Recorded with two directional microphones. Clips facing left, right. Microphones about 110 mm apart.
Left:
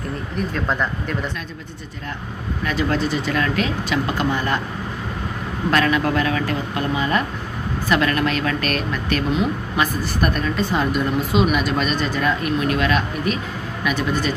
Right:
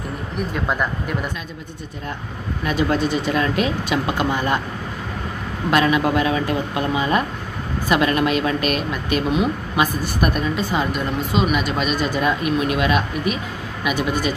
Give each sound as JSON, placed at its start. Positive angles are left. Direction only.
{"t": 0.5, "sound": "speech", "side_deg": -10}
{"t": 2.6, "sound": "speech", "side_deg": -15}
{"t": 5.7, "sound": "speech", "side_deg": -15}